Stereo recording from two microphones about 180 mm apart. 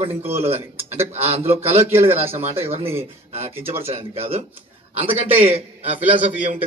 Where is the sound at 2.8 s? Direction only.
35° right (ahead or behind).